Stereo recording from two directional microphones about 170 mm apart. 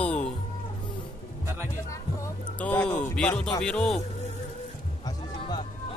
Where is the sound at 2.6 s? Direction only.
10° left (ahead or behind).